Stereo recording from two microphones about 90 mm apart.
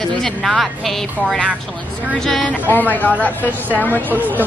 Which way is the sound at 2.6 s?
20° left (ahead or behind).